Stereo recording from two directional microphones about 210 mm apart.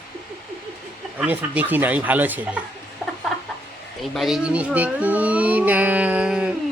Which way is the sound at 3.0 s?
10° right (ahead or behind).